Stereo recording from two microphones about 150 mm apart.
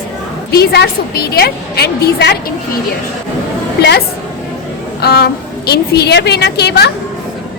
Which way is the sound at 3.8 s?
90° left.